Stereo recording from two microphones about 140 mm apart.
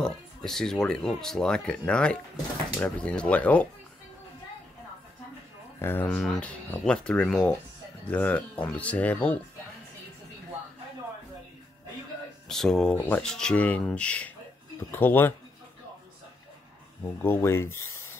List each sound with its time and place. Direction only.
0.0 s speech: 5° left (ahead or behind)
5.8 s speech: 15° left (ahead or behind)
6.0 s speech: 5° left (ahead or behind)
12.4 s speech: 5° left (ahead or behind)
17.2 s speech: 15° left (ahead or behind)